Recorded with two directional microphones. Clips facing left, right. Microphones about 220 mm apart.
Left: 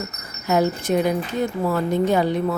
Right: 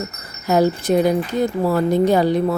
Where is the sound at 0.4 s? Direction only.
35° right (ahead or behind).